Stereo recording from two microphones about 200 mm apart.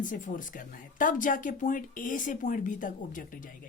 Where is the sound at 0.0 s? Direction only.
40° left (ahead or behind).